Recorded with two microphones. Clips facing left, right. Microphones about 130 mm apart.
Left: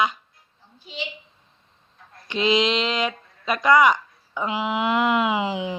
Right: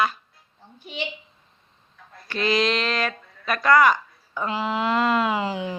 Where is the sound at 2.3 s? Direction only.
20° left (ahead or behind).